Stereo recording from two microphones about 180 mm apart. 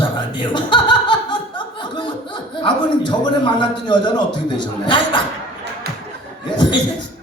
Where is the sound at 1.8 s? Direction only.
25° left (ahead or behind).